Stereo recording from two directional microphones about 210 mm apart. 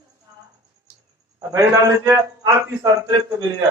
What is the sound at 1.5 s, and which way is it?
A man's voice, 15° right (ahead or behind).